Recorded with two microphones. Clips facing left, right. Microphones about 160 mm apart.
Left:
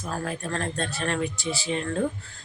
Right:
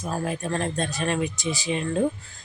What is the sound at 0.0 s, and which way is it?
Speech, 15° right (ahead or behind).